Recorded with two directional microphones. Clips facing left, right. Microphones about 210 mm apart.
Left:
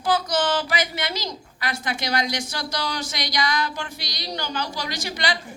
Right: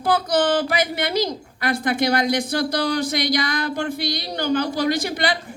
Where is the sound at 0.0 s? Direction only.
55° right (ahead or behind).